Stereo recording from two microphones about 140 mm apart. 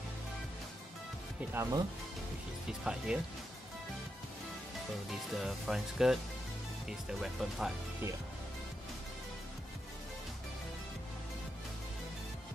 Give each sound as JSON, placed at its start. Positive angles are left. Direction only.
{"t": 1.5, "sound": "speech", "side_deg": -20}
{"t": 2.8, "sound": "speech", "side_deg": -5}
{"t": 5.1, "sound": "speech", "side_deg": -5}